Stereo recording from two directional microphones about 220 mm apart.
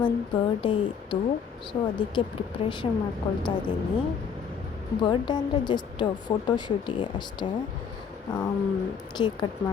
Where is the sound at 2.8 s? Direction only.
20° left (ahead or behind).